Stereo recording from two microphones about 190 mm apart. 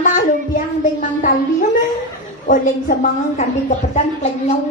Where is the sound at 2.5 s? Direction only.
40° left (ahead or behind).